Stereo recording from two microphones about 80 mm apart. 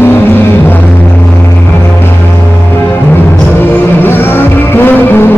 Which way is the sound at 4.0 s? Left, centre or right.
Left.